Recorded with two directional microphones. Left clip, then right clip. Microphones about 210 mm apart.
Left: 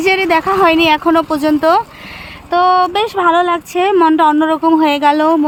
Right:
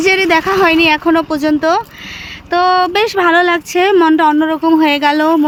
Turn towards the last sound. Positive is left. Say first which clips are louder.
# even
turn(degrees=0)  # may be behind; listen again after turning